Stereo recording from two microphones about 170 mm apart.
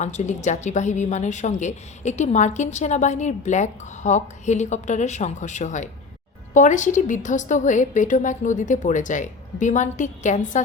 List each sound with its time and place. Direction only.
0.0 s a woman's voice: 45° left (ahead or behind)